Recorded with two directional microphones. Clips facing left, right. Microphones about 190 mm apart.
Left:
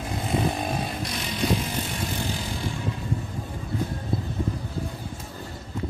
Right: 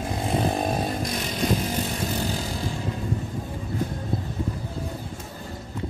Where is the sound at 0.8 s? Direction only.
45° right (ahead or behind).